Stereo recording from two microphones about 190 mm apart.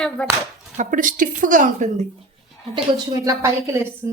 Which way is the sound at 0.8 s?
45° right (ahead or behind).